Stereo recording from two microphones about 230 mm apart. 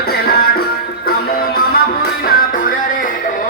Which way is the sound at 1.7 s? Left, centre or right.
Left.